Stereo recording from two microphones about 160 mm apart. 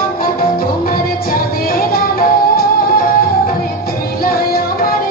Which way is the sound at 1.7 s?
70° left (ahead or behind).